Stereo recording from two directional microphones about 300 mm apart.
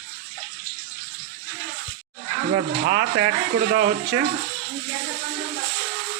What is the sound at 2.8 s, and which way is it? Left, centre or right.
Speech, right.